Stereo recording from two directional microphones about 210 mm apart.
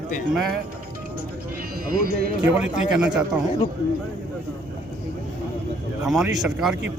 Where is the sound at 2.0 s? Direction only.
45° right (ahead or behind).